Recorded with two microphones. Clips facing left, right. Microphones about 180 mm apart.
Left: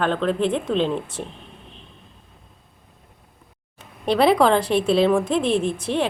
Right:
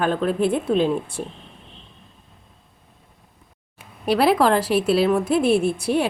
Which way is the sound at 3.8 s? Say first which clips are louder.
Left 1 dB; 5° right (ahead or behind).